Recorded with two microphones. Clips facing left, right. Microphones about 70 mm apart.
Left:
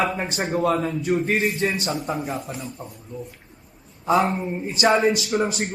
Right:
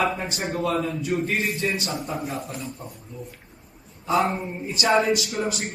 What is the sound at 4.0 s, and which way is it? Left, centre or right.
A man's voice, left.